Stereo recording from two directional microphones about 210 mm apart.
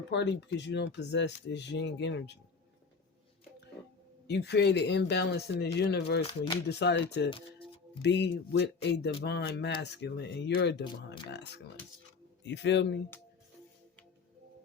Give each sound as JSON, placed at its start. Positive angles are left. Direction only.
{"t": 0.1, "sound": "speech", "side_deg": 55}
{"t": 4.3, "sound": "speech", "side_deg": 50}
{"t": 6.2, "sound": "speech", "side_deg": 20}
{"t": 6.7, "sound": "speech", "side_deg": 55}
{"t": 7.3, "sound": "speech", "side_deg": 25}
{"t": 8.0, "sound": "speech", "side_deg": 55}